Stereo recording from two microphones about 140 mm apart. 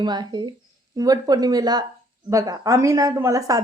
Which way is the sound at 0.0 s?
30° right (ahead or behind).